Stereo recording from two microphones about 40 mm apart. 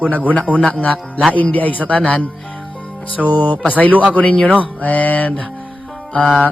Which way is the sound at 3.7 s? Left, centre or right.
Left.